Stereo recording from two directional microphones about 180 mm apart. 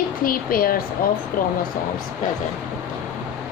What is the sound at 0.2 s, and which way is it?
Speech, 55° left (ahead or behind).